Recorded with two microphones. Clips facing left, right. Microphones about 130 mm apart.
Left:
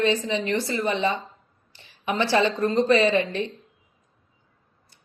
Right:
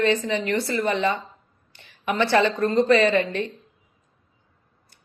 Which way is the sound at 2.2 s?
60° right (ahead or behind).